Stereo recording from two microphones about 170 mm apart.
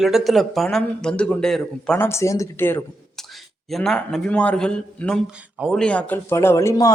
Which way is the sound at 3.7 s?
Centre (ahead or behind).